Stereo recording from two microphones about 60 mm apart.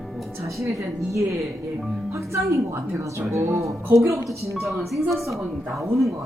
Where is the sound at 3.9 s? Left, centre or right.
Right.